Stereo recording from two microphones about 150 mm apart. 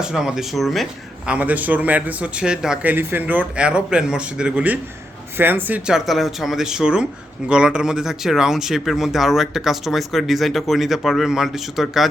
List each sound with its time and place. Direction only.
0.0 s speech: 5° right (ahead or behind)
1.3 s a man's voice: 10° right (ahead or behind)